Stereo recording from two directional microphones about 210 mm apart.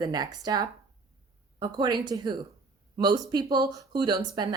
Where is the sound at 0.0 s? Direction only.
20° right (ahead or behind).